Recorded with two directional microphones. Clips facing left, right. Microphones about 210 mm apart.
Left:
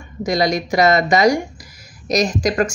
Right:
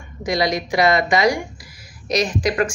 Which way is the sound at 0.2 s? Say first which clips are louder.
Left 2 dB; 45° left (ahead or behind).